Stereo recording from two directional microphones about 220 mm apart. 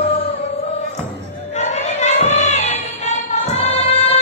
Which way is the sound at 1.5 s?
30° left (ahead or behind).